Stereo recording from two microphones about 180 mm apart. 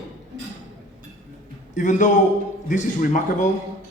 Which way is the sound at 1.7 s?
45° left (ahead or behind).